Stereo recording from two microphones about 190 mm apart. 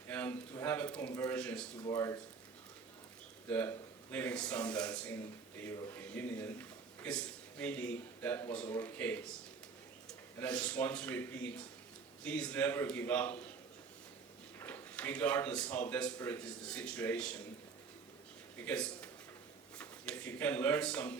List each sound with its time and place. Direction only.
0.1 s a man's voice: 10° left (ahead or behind)
3.5 s a man's voice: 10° left (ahead or behind)
14.6 s a man's voice: 10° left (ahead or behind)
18.6 s a man's voice: 5° left (ahead or behind)